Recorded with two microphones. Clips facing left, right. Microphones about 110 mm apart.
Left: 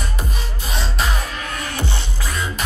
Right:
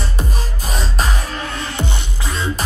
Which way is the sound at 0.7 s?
40° right (ahead or behind).